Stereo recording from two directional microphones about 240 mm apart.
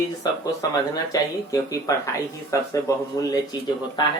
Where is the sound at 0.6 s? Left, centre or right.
Centre.